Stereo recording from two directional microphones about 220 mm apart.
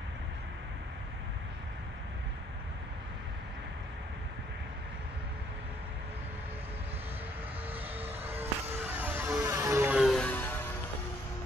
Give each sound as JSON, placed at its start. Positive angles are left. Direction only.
{"t": 7.7, "sound": "vehicle", "side_deg": -25}
{"t": 8.9, "sound": "music", "side_deg": -10}